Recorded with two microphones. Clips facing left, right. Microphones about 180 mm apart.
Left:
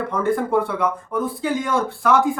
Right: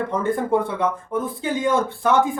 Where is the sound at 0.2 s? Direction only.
20° right (ahead or behind).